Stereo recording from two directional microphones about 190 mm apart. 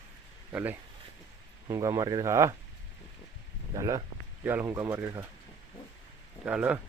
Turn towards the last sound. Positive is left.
turn(degrees=-5)  # may be behind; listen again after turning